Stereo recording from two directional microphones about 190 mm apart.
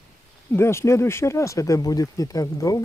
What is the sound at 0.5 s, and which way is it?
Speech, 15° left (ahead or behind).